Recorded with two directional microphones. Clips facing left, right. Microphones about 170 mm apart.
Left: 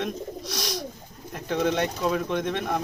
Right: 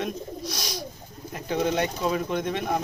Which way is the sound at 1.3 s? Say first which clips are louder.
Left 1 dB; 5° right (ahead or behind).